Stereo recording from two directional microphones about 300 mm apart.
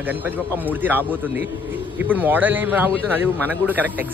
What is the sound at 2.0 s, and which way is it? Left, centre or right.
Speech, centre.